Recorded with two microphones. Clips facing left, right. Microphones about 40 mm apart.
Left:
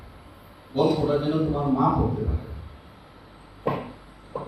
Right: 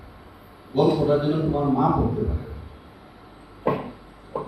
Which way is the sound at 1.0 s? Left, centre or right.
Centre.